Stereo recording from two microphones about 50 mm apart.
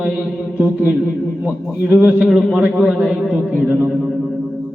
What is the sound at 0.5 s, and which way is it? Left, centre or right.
A man's voice, right.